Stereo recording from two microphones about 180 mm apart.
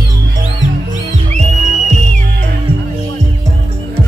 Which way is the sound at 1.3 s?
40° right (ahead or behind).